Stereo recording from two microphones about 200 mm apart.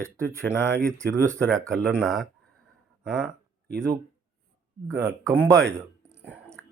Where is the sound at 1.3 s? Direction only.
5° left (ahead or behind).